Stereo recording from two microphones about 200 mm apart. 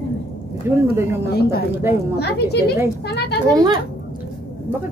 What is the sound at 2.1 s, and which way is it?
Speech, 55° left (ahead or behind).